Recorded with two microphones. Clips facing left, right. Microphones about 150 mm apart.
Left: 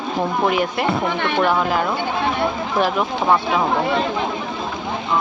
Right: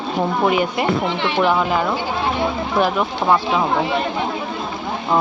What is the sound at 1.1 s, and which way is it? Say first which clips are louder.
Speech: even; 55° left (ahead or behind).